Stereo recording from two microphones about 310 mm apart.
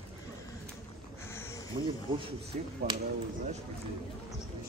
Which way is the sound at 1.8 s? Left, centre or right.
Centre.